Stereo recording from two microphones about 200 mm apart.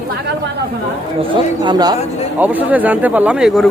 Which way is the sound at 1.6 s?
20° right (ahead or behind).